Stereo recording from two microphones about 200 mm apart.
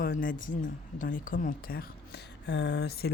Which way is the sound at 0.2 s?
45° left (ahead or behind).